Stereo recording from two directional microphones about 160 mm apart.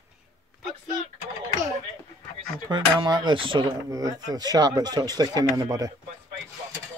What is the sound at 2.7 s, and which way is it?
Speech, 30° right (ahead or behind).